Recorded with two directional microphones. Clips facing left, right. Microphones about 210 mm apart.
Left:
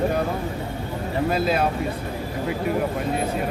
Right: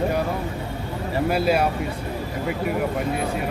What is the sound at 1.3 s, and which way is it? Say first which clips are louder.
Speech: right 2 dB; 10° right (ahead or behind).